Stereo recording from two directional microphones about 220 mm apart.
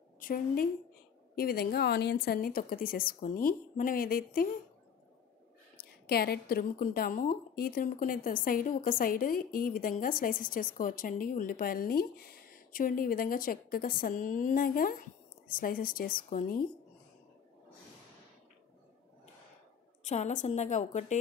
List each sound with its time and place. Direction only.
0.2 s a woman's voice: 40° left (ahead or behind)
6.0 s a woman's voice: 45° left (ahead or behind)
20.0 s a woman's voice: 30° left (ahead or behind)